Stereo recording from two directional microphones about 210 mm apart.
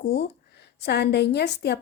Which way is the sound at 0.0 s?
50° left (ahead or behind).